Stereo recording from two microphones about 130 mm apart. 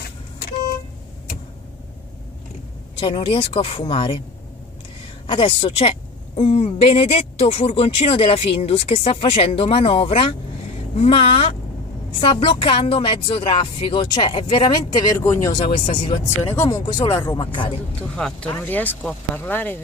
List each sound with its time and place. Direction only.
3.0 s a woman's voice: 40° left (ahead or behind)
5.2 s a woman's voice: 45° left (ahead or behind)
16.5 s speech: 25° left (ahead or behind)
17.3 s speech: 35° left (ahead or behind)
18.1 s speech: 5° left (ahead or behind)